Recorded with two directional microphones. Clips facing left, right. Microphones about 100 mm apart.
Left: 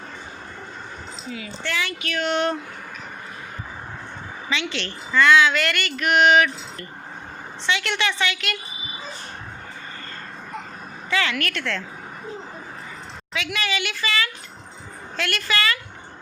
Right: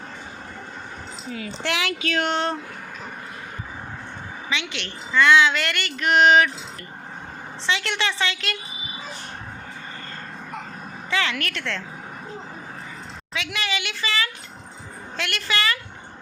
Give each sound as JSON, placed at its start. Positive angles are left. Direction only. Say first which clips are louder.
{"t": 1.6, "sound": "speech", "louder": "right 2 dB", "side_deg": -90}
{"t": 2.2, "sound": "speech", "louder": "left 5 dB", "side_deg": -30}
{"t": 4.4, "sound": "speech", "louder": "left 3 dB", "side_deg": -20}
{"t": 7.7, "sound": "speech", "louder": "left 1 dB", "side_deg": -25}
{"t": 11.1, "sound": "speech", "louder": "left 1 dB", "side_deg": -25}
{"t": 13.3, "sound": "speech", "louder": "left 2 dB", "side_deg": -25}